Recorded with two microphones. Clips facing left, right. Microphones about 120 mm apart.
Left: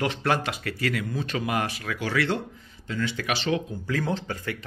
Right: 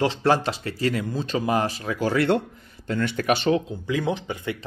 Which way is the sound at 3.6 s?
20° right (ahead or behind).